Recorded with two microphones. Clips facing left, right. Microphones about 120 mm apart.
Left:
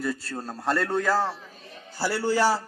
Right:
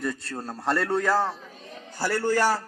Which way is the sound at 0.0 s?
5° left (ahead or behind).